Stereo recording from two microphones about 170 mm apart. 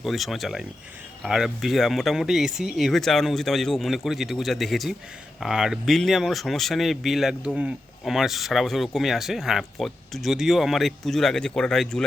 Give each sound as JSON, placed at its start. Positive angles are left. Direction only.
{"t": 0.0, "sound": "speech", "side_deg": 0}